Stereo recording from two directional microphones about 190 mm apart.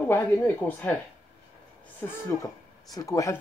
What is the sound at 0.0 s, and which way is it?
Speech, 10° left (ahead or behind).